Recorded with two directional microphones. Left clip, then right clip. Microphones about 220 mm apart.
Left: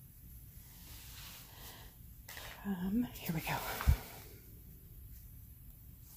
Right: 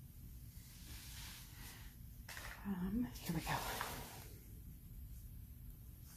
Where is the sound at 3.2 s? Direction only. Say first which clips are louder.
Left 3 dB; 30° left (ahead or behind).